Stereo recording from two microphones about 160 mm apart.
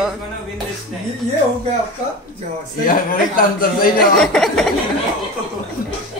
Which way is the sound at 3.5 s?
65° left (ahead or behind).